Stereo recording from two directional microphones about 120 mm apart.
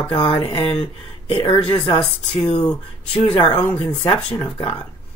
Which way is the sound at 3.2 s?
50° left (ahead or behind).